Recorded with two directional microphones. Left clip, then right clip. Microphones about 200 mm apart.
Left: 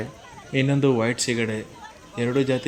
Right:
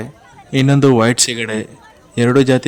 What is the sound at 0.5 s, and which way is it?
A man's voice, 45° right (ahead or behind).